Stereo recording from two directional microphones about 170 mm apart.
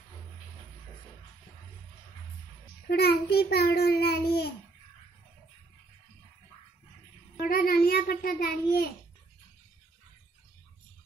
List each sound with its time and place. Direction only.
2.9 s a child's voice: 70° left (ahead or behind)
7.3 s a child's voice: 60° left (ahead or behind)